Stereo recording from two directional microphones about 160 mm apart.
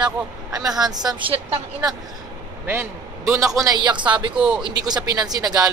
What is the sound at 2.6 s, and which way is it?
A man's voice, 15° right (ahead or behind).